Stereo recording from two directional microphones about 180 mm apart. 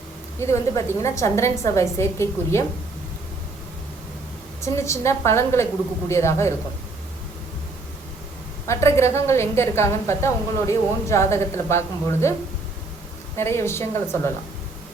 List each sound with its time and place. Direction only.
0.3 s a woman's voice: 15° left (ahead or behind)
4.6 s a woman's voice: 15° left (ahead or behind)
8.6 s a woman's voice: 15° left (ahead or behind)
13.3 s a woman's voice: 15° left (ahead or behind)